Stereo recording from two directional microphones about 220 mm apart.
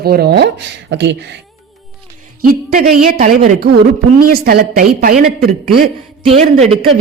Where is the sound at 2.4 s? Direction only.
40° right (ahead or behind).